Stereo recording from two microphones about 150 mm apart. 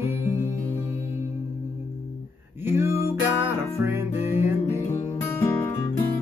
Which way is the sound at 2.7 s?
15° right (ahead or behind).